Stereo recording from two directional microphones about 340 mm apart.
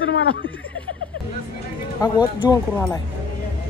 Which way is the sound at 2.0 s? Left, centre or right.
Centre.